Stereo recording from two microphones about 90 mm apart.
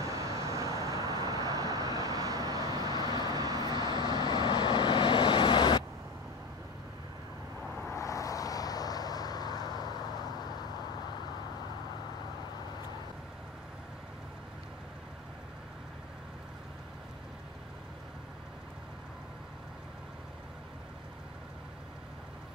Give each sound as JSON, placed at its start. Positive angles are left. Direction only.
{"t": 0.0, "sound": "vehicle", "side_deg": -35}
{"t": 3.9, "sound": "vehicle", "side_deg": 50}
{"t": 7.9, "sound": "vehicle", "side_deg": 40}